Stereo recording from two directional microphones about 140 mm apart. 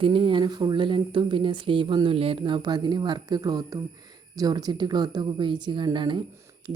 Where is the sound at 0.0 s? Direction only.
40° right (ahead or behind).